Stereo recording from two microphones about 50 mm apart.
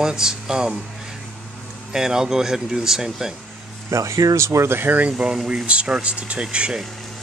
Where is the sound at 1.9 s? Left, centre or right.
Centre.